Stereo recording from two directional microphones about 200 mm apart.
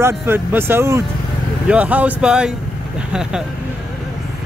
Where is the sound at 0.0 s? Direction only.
10° right (ahead or behind).